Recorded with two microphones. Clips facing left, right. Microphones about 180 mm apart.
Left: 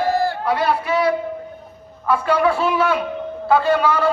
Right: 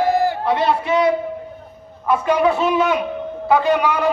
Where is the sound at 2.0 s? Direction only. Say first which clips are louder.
Right 1 dB; 20° right (ahead or behind).